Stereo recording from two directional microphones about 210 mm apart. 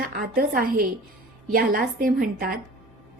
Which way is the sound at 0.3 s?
45° right (ahead or behind).